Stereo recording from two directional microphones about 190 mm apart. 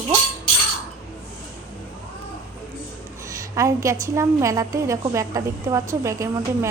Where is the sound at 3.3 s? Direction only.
15° right (ahead or behind).